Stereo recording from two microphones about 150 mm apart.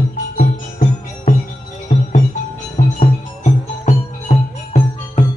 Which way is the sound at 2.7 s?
50° left (ahead or behind).